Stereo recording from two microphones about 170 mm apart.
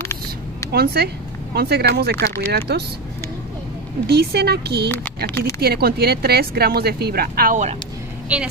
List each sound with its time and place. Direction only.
0.7 s speech: 70° right (ahead or behind)
4.1 s speech: 75° right (ahead or behind)
4.8 s speech: 10° left (ahead or behind)
5.6 s speech: 65° right (ahead or behind); by 7.7 s 50° right (ahead or behind)
8.3 s a woman's voice: 10° right (ahead or behind)